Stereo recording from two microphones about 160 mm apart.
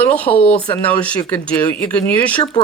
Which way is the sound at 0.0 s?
10° left (ahead or behind).